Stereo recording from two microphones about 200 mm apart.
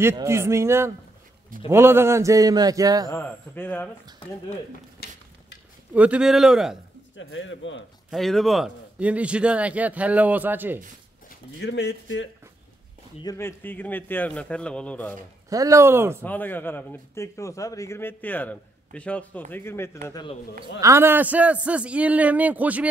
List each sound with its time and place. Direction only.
0.0 s speech: 15° right (ahead or behind)
3.1 s speech: 10° left (ahead or behind)
5.0 s a sound: 55° left (ahead or behind)
5.9 s a man's voice: 5° right (ahead or behind)
7.2 s speech: 70° left (ahead or behind)
8.1 s speech: centre (ahead or behind)
11.2 s speech: 55° left (ahead or behind)
13.2 s speech: 15° left (ahead or behind)
15.5 s speech: 15° right (ahead or behind)
16.3 s a man's voice: 10° left (ahead or behind)
20.8 s speech: 10° right (ahead or behind)